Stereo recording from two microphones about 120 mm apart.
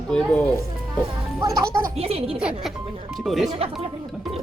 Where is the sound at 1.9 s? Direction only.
55° right (ahead or behind).